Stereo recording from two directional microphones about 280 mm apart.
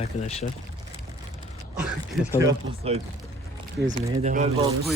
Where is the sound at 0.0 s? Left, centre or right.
Left.